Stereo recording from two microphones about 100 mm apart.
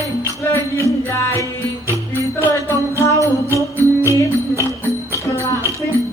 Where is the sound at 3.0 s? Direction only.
30° left (ahead or behind).